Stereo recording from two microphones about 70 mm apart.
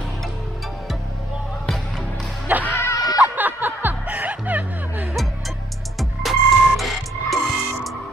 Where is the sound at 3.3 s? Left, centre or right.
Right.